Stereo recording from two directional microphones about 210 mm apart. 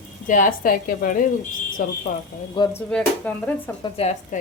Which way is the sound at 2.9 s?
5° left (ahead or behind).